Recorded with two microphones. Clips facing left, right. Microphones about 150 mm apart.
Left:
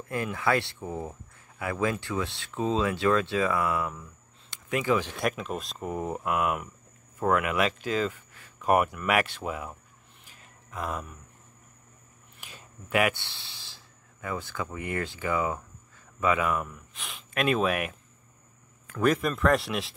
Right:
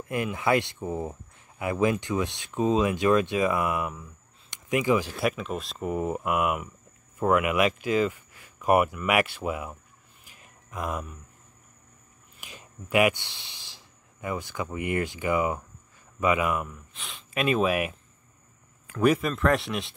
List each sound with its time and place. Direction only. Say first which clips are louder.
0.1 s speech: right 2 dB; 15° right (ahead or behind)
12.4 s speech: right 3 dB; 10° right (ahead or behind)